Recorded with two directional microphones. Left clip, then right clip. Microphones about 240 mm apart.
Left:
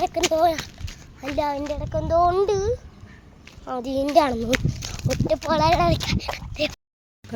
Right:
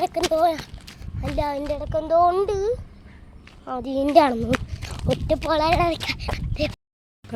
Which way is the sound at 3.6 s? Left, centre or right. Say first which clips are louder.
Even; centre.